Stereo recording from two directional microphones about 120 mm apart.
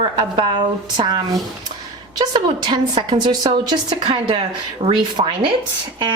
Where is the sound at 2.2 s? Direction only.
40° right (ahead or behind).